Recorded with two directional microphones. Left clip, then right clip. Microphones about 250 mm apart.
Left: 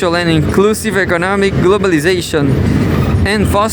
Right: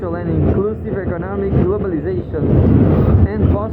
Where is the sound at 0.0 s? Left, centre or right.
Left.